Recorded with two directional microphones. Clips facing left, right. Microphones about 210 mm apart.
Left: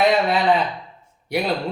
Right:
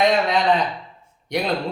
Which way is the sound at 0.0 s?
5° left (ahead or behind).